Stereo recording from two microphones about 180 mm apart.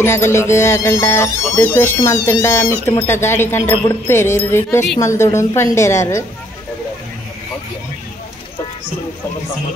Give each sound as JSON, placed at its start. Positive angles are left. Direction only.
{"t": 0.0, "sound": "speech", "side_deg": 15}